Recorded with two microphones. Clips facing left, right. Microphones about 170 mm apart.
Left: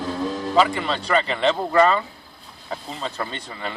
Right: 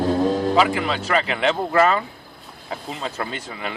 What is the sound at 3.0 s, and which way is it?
Speech, 5° right (ahead or behind).